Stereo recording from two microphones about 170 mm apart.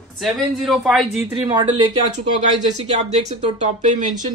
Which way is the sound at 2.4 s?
40° right (ahead or behind).